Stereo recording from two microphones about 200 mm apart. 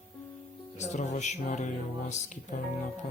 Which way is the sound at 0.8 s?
35° left (ahead or behind).